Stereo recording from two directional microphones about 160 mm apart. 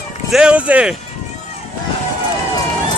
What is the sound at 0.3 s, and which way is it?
Speech, 5° right (ahead or behind).